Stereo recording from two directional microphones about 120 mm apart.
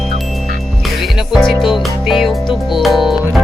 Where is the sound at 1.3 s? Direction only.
Centre (ahead or behind).